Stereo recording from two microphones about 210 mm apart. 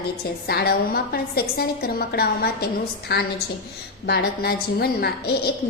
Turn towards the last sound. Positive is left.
turn(degrees=50)  # may be behind; listen again after turning